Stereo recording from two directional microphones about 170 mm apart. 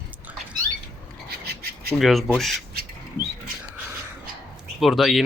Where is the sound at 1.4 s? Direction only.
70° right (ahead or behind).